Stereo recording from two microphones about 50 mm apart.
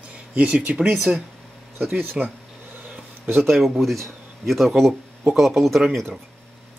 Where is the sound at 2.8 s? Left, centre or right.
Right.